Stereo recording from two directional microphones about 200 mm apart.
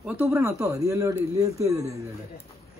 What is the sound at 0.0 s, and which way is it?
Speech, 10° right (ahead or behind).